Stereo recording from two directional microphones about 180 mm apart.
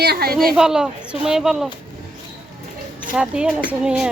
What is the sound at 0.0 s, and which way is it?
Speech, 60° right (ahead or behind).